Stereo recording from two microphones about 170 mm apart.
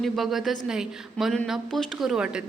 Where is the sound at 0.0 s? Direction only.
Centre (ahead or behind).